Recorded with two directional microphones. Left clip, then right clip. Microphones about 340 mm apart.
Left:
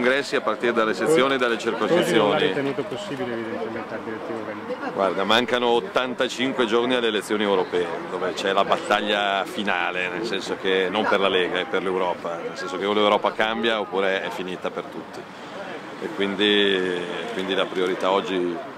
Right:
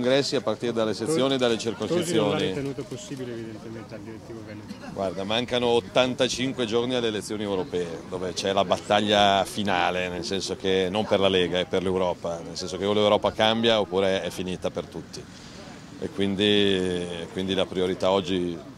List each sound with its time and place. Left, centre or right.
0.0 s speech: right
5.0 s speech: centre
8.5 s a man's voice: right
16.2 s a man's voice: right